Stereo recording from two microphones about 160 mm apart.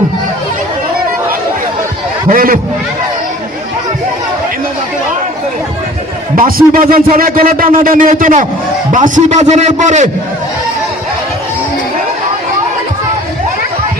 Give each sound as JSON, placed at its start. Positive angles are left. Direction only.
{"t": 2.3, "sound": "speech", "side_deg": -60}
{"t": 6.3, "sound": "a man's voice", "side_deg": -60}